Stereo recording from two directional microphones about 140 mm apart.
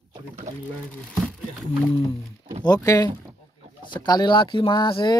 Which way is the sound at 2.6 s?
30° left (ahead or behind).